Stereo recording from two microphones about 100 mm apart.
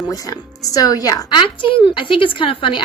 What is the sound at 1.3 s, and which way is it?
Speech, 50° left (ahead or behind).